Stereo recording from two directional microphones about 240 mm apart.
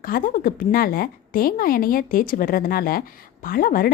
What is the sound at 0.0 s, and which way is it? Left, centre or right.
A woman's voice, left.